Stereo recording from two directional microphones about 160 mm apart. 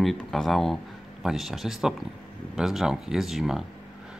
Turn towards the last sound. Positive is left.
turn(degrees=0)  # may be behind; listen again after turning